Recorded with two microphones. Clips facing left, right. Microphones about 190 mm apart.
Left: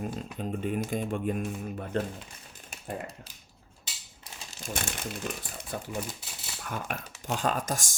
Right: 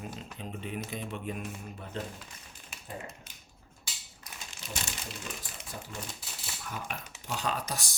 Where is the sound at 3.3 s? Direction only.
35° left (ahead or behind).